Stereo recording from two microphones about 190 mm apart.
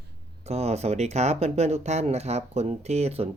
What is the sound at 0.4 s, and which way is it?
Speech, 35° right (ahead or behind).